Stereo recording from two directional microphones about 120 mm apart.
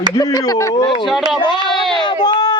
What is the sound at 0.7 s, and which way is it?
Speech, 40° left (ahead or behind).